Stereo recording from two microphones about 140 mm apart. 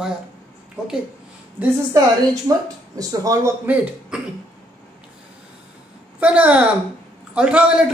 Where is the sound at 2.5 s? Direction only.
25° right (ahead or behind).